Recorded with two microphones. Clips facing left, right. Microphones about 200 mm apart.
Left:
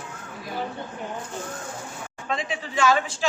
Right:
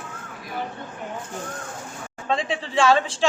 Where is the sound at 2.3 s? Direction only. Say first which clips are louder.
Right 4 dB; 30° right (ahead or behind).